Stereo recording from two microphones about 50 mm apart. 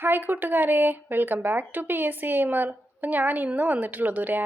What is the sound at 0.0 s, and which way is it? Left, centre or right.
Speech, right.